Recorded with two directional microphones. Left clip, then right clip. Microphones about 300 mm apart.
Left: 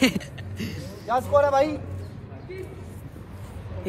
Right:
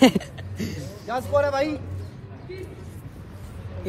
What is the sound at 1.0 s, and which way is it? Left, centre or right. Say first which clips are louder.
Speech: left 2 dB; left.